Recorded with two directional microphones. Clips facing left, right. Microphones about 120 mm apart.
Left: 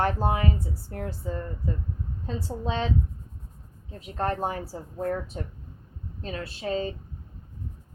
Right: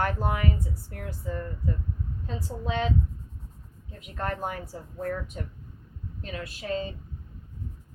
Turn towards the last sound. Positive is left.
turn(degrees=30)  # may be behind; listen again after turning